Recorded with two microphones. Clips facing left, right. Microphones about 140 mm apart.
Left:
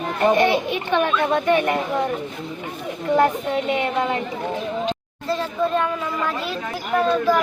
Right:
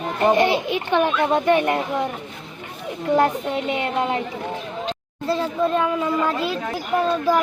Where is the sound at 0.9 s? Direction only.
15° right (ahead or behind).